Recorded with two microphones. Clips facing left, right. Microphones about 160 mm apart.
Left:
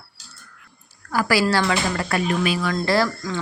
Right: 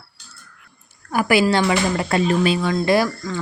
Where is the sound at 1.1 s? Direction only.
20° right (ahead or behind).